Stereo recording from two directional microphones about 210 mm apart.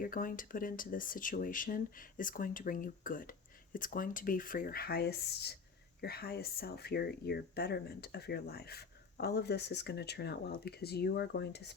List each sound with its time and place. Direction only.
0.0 s speech: 40° left (ahead or behind)